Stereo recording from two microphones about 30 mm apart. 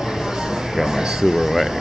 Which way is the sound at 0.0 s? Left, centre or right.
Centre.